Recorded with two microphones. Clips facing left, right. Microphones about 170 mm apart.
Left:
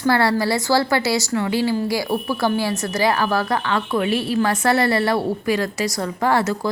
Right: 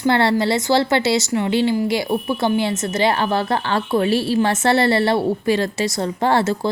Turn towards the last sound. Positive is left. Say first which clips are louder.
# right 1 dB
turn(degrees=-30)  # may be behind; listen again after turning